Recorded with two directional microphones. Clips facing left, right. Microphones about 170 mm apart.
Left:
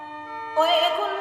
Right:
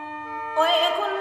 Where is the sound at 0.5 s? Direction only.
5° left (ahead or behind).